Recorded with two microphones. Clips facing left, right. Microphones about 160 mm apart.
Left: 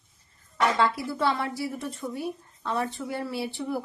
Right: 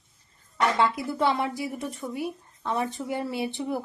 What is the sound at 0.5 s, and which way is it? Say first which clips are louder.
A woman's voice: even; 20° right (ahead or behind).